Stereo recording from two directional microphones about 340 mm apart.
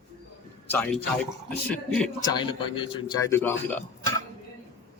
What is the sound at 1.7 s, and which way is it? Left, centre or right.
Speech, centre.